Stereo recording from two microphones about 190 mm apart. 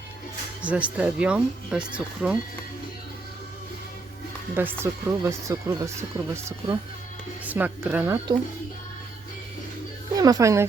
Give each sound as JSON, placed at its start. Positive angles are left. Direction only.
{"t": 0.6, "sound": "speech", "side_deg": -5}
{"t": 4.5, "sound": "speech", "side_deg": -10}
{"t": 10.2, "sound": "speech", "side_deg": -20}